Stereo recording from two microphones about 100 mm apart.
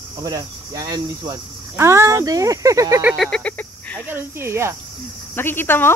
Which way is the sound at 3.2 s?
10° left (ahead or behind).